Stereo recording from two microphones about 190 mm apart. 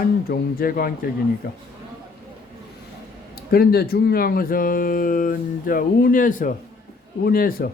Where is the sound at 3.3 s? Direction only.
55° left (ahead or behind).